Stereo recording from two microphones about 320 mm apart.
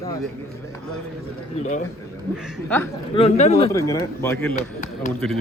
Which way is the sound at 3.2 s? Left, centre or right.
Centre.